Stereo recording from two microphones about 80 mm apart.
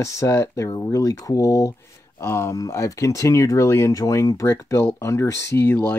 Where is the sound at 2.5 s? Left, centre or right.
Left.